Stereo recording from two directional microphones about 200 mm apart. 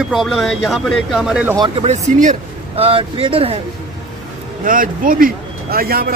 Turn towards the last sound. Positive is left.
turn(degrees=-50)  # may be behind; listen again after turning